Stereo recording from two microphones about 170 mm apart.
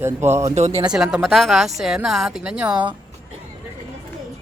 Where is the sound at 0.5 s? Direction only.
40° right (ahead or behind).